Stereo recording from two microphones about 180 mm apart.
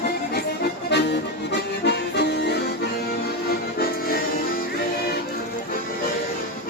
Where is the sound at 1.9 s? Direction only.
65° left (ahead or behind).